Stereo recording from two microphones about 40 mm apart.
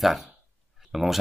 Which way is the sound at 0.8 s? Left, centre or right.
Centre.